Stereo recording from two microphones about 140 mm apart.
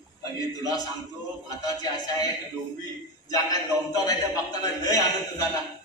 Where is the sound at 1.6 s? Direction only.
25° left (ahead or behind).